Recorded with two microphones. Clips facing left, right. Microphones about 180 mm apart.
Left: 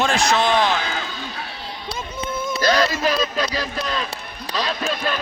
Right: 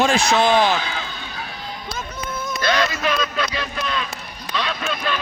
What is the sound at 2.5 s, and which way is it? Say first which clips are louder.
A man's voice: left 2 dB; 35° left (ahead or behind).